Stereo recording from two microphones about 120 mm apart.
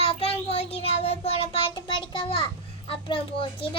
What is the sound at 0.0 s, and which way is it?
Child singing, 55° left (ahead or behind).